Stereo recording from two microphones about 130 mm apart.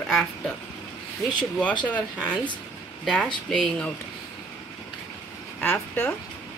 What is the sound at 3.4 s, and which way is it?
Speech, 5° left (ahead or behind).